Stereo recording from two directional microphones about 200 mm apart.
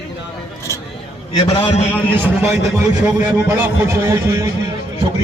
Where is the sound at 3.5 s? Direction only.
10° right (ahead or behind).